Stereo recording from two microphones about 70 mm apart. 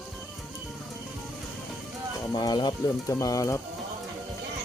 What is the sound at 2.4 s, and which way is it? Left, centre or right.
Speech, left.